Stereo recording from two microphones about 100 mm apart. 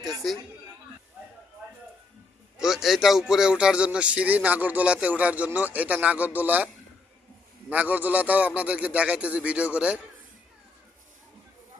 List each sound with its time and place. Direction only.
0.0 s chatter: centre (ahead or behind)
2.6 s a man's voice: 5° right (ahead or behind)
7.7 s a man's voice: 15° right (ahead or behind)